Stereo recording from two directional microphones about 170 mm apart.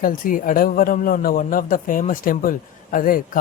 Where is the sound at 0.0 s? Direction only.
55° left (ahead or behind).